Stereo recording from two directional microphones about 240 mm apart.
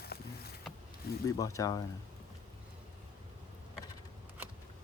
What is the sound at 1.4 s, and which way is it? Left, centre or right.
Speech, centre.